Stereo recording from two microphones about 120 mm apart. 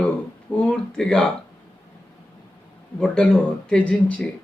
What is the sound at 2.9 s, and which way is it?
Speech, 5° left (ahead or behind).